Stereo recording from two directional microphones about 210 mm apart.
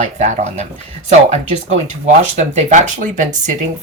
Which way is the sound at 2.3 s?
35° right (ahead or behind).